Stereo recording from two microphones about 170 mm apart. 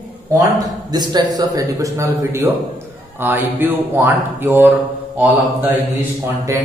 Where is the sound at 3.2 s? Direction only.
10° right (ahead or behind).